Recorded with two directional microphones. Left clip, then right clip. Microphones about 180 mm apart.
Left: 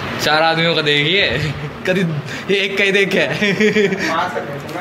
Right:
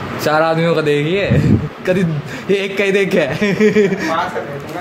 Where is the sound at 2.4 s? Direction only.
45° right (ahead or behind).